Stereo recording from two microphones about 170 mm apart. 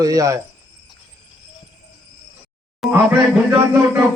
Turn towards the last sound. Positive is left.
turn(degrees=-10)  # may be behind; listen again after turning